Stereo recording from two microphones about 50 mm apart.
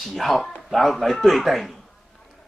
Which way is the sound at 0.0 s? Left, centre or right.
Centre.